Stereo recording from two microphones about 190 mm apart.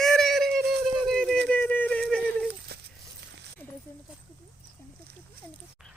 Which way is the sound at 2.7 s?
60° right (ahead or behind).